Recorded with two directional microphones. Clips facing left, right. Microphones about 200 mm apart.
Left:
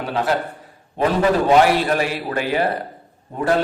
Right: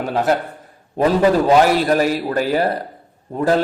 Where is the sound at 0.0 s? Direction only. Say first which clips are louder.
Right 3 dB; 45° right (ahead or behind).